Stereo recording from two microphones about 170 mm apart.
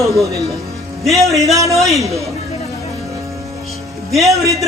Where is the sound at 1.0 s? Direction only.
Centre (ahead or behind).